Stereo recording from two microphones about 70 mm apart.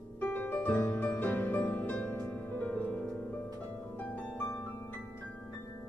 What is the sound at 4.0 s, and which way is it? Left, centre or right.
Harp, left.